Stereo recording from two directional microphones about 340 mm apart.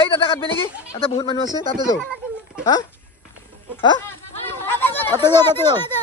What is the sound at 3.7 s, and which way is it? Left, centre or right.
Speech, centre.